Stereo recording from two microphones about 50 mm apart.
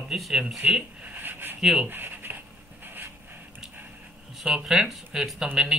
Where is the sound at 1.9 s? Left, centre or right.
Right.